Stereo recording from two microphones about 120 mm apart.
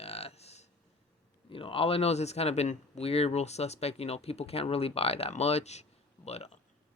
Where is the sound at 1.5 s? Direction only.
50° left (ahead or behind).